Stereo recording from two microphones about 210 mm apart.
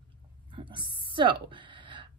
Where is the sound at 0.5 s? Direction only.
20° right (ahead or behind).